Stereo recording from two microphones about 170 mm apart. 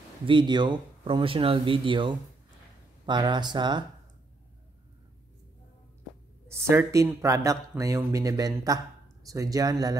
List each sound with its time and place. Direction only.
0.3 s speech: 25° right (ahead or behind)
6.4 s speech: 15° right (ahead or behind)